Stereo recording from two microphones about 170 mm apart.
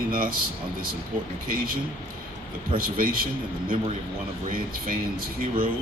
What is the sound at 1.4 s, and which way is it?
Speech, 55° right (ahead or behind).